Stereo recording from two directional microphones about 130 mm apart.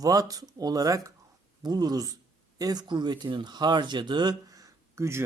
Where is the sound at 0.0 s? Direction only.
30° right (ahead or behind).